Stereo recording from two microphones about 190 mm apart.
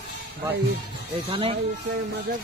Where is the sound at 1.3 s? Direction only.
30° right (ahead or behind).